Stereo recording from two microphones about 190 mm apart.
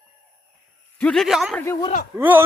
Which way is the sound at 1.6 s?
15° left (ahead or behind).